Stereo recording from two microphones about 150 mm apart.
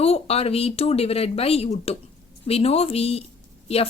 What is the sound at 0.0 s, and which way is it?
A woman's voice, 45° left (ahead or behind).